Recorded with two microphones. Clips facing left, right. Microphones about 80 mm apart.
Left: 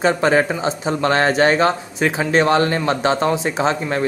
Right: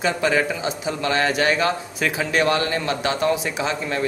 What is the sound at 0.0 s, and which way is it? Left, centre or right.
A man's voice, left.